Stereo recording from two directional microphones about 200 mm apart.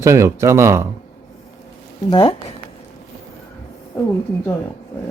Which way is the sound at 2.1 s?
25° left (ahead or behind).